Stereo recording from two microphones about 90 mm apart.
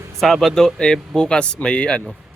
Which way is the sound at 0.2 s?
Centre (ahead or behind).